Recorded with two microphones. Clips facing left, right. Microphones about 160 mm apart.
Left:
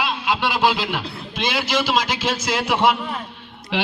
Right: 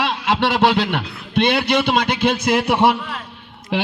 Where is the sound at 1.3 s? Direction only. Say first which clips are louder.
Right 7 dB; 65° right (ahead or behind).